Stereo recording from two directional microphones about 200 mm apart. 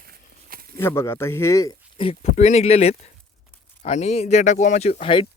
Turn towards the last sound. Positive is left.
turn(degrees=25)  # may be behind; listen again after turning